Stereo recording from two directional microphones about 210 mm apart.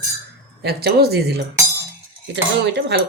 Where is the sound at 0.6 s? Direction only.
50° right (ahead or behind).